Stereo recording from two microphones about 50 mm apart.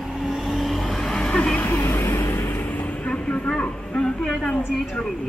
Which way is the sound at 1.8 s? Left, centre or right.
Left.